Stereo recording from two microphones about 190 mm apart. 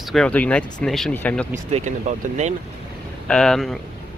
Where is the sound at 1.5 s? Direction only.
40° right (ahead or behind).